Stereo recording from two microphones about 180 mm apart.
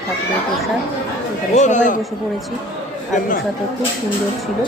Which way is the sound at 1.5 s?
45° left (ahead or behind).